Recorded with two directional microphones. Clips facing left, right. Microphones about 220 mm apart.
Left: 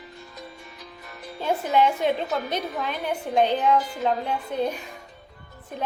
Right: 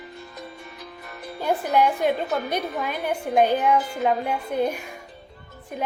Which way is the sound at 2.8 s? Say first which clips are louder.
Right 2 dB; 10° right (ahead or behind).